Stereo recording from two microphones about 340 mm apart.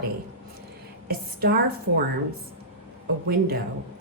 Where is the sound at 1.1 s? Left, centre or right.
Right.